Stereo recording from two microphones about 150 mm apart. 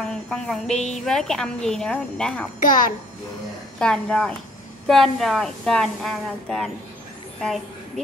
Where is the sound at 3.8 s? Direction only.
5° left (ahead or behind).